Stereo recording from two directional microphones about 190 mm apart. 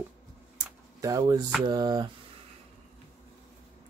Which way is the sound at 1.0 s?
20° right (ahead or behind).